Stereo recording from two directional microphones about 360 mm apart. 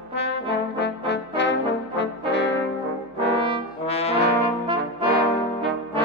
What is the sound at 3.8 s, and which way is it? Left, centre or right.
Brass instrument, centre.